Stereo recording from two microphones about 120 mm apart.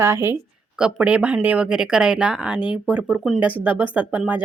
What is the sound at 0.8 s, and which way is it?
Speech, 10° right (ahead or behind).